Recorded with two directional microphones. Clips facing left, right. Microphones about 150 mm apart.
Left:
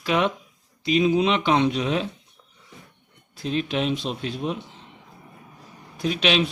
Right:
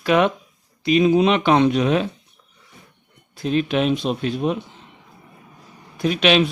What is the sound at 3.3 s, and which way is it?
A man's voice, 55° right (ahead or behind).